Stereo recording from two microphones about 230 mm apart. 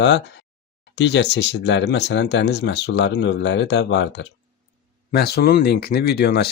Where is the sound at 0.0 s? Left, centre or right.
Left.